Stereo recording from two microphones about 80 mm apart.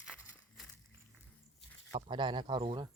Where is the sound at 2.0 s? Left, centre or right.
Right.